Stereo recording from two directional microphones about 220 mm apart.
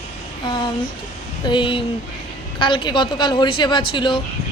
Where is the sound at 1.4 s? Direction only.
20° left (ahead or behind).